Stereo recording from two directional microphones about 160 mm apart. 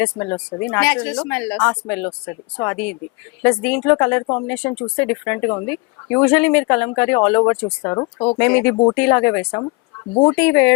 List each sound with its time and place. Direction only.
0.0 s speech: 20° left (ahead or behind)
8.4 s speech: 10° left (ahead or behind)
8.7 s speech: 30° left (ahead or behind)
9.0 s speech: 15° left (ahead or behind)